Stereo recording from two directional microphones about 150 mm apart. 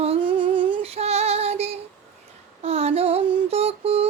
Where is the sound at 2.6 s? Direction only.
45° right (ahead or behind).